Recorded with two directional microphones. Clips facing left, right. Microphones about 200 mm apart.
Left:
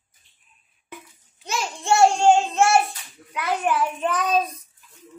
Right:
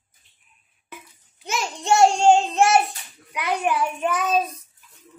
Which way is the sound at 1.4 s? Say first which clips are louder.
Right 1 dB; 20° right (ahead or behind).